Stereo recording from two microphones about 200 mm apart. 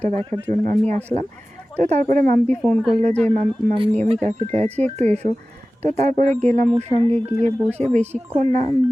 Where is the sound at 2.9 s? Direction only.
35° right (ahead or behind).